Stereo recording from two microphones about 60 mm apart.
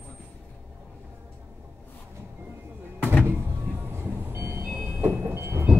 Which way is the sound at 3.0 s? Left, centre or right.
Left.